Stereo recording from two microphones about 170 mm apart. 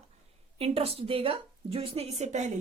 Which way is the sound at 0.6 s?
35° right (ahead or behind).